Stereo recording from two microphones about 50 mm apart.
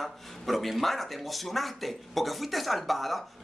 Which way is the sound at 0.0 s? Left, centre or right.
Centre.